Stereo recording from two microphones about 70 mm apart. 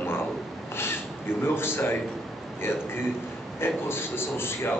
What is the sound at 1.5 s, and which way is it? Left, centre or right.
Speech, left.